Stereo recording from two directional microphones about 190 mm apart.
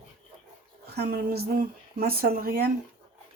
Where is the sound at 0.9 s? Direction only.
55° right (ahead or behind).